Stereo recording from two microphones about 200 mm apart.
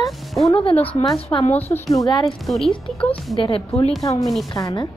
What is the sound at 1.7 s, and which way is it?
Speech, 20° left (ahead or behind).